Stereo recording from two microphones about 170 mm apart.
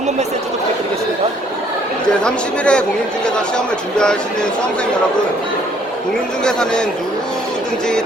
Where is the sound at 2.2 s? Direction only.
5° left (ahead or behind).